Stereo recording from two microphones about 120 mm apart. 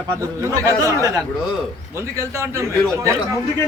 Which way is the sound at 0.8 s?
25° left (ahead or behind).